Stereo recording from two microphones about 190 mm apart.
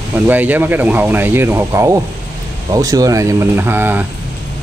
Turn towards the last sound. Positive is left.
turn(degrees=-10)  # may be behind; listen again after turning